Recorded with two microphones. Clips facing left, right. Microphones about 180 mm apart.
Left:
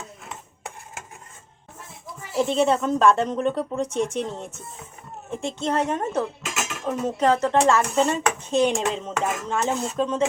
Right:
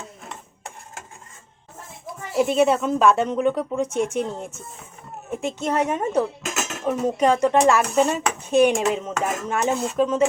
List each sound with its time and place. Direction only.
2.4 s speech: 10° right (ahead or behind)
6.4 s dishes: 45° right (ahead or behind)
6.8 s speech: 15° right (ahead or behind)